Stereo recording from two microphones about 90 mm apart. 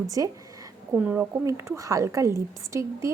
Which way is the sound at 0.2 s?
35° right (ahead or behind).